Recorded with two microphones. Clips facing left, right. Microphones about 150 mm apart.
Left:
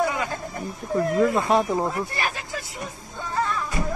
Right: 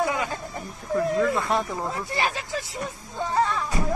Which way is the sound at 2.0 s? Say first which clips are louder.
Right 2 dB; 25° right (ahead or behind).